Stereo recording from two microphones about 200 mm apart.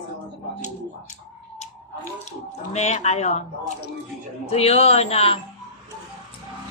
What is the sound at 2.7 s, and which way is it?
Speech, 35° left (ahead or behind).